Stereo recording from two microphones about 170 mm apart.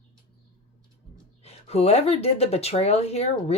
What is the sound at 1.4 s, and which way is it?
Speech, 40° left (ahead or behind).